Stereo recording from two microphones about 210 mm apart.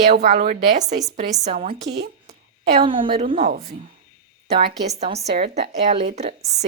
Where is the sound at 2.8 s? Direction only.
25° right (ahead or behind).